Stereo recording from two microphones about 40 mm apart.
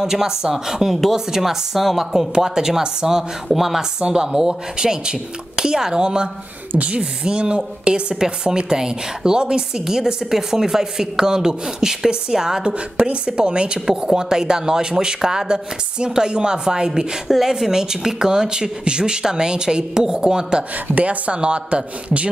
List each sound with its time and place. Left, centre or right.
0.0 s a woman's voice: centre
3.4 s speech: centre
4.0 s a woman's voice: centre
6.7 s a woman's voice: right
7.0 s a woman's voice: right
12.7 s a woman's voice: right
17.3 s a woman's voice: centre
20.9 s speech: right